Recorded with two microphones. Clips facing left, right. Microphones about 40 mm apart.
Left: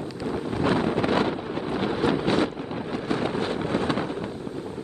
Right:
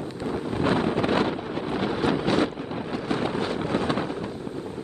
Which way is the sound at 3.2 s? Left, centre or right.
Left.